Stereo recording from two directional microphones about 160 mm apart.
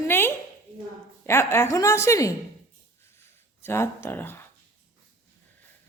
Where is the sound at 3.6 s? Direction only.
15° left (ahead or behind).